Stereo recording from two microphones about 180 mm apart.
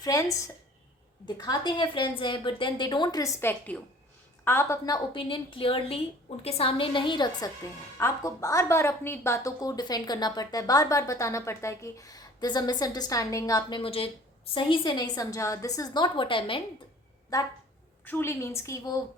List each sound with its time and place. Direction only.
0.0 s a woman's voice: 20° left (ahead or behind)